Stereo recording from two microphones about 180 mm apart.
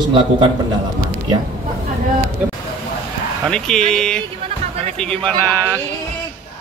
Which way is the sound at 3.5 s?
5° left (ahead or behind).